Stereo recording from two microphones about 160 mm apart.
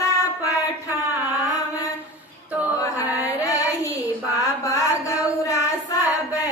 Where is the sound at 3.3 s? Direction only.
20° left (ahead or behind).